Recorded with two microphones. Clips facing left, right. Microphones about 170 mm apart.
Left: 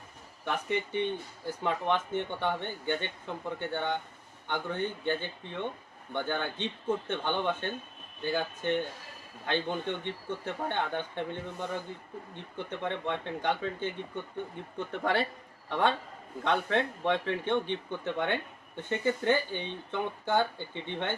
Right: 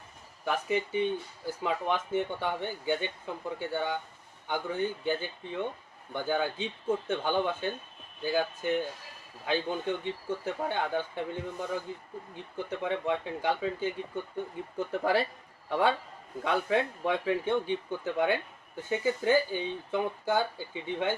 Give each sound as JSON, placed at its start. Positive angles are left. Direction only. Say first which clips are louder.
{"t": 0.4, "sound": "speech", "louder": "right 2 dB", "side_deg": -5}
{"t": 12.8, "sound": "speech", "louder": "right 3 dB", "side_deg": -5}